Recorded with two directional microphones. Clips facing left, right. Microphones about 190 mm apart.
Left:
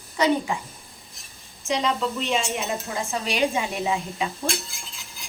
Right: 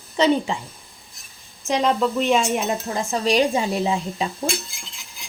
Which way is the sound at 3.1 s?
40° right (ahead or behind).